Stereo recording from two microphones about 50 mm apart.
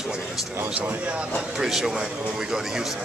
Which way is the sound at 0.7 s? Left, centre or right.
Right.